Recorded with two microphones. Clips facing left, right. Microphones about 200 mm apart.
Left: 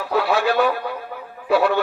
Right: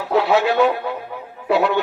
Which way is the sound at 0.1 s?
20° right (ahead or behind).